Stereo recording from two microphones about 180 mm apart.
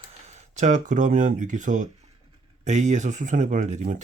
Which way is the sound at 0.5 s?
40° right (ahead or behind).